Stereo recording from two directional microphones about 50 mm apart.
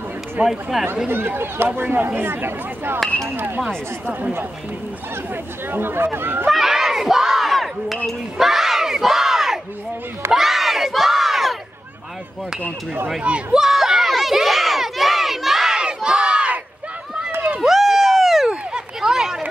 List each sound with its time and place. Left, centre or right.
0.5 s speech: centre
1.0 s speech: right
5.7 s speech: right
6.5 s crowd: centre
8.4 s battle cry: centre
10.3 s crowd: centre
13.2 s speech: right
13.6 s crowd: centre
17.6 s a sound: centre